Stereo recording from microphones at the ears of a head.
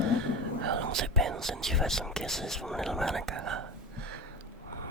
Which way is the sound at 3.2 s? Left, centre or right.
Right.